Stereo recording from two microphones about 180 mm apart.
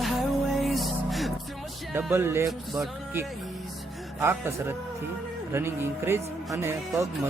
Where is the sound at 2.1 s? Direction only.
15° right (ahead or behind).